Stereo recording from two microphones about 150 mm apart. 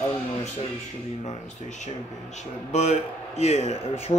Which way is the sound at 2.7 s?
50° left (ahead or behind).